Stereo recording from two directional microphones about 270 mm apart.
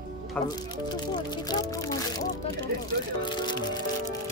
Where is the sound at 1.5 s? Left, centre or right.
Centre.